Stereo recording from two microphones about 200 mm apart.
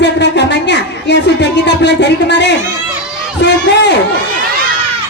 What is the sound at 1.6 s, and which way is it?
Speech, 60° left (ahead or behind).